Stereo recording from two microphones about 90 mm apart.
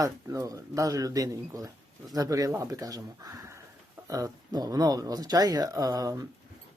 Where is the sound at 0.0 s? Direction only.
40° right (ahead or behind).